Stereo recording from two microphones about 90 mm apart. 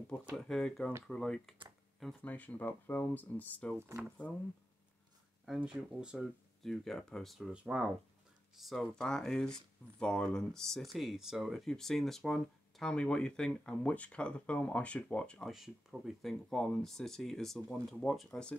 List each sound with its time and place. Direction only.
0.5 s speech: 5° left (ahead or behind)
2.2 s speech: 15° left (ahead or behind)
3.7 s speech: 25° right (ahead or behind)
4.2 s speech: 20° left (ahead or behind)
5.7 s speech: 10° right (ahead or behind)
6.1 s speech: 5° left (ahead or behind)
7.5 s speech: 10° right (ahead or behind)
8.5 s speech: centre (ahead or behind)
15.5 s speech: 5° right (ahead or behind)